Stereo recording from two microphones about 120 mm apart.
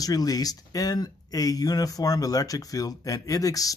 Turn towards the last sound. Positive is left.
turn(degrees=30)  # may be behind; listen again after turning